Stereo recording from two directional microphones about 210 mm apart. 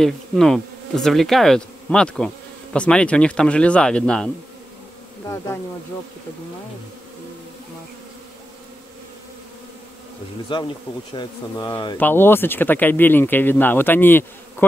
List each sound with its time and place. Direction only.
0.0 s bee: centre (ahead or behind)
10.5 s speech: 25° left (ahead or behind)